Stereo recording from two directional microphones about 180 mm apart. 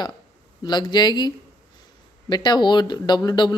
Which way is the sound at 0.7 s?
25° left (ahead or behind).